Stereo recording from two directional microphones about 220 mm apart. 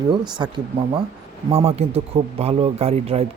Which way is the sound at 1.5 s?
25° right (ahead or behind).